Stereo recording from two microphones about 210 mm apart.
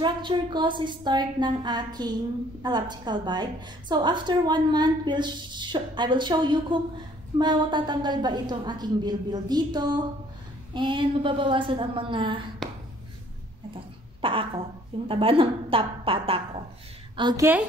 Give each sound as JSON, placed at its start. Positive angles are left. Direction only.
{"t": 0.0, "sound": "a woman's voice", "side_deg": -20}
{"t": 14.2, "sound": "a woman's voice", "side_deg": -25}